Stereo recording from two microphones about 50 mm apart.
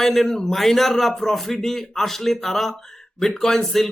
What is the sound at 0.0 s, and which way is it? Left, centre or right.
Speech, centre.